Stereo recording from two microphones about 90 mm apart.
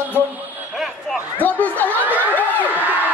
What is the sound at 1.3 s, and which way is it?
Speech, 20° left (ahead or behind).